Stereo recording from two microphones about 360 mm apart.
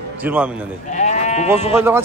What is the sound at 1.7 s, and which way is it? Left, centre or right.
Speech, centre.